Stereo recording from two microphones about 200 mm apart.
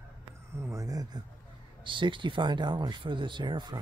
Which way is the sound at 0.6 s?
15° right (ahead or behind).